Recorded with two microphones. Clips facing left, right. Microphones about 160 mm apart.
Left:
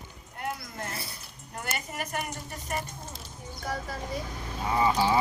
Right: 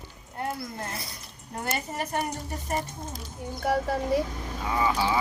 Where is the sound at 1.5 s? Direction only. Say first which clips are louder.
Right 5 dB; 35° right (ahead or behind).